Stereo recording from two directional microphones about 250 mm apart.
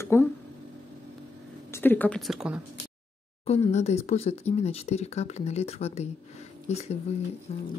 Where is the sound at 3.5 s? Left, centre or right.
Left.